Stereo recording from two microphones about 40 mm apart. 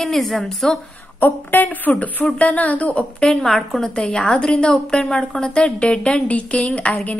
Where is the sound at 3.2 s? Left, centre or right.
Centre.